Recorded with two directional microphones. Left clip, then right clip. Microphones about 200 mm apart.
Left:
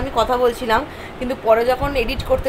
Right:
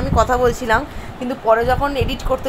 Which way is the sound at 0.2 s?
15° right (ahead or behind).